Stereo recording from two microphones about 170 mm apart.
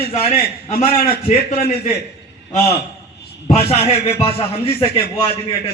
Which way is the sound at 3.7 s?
35° left (ahead or behind).